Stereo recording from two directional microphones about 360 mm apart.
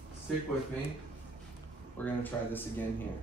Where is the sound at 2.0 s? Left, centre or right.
Centre.